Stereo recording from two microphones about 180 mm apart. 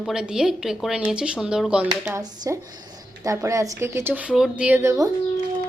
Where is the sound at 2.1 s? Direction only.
15° right (ahead or behind).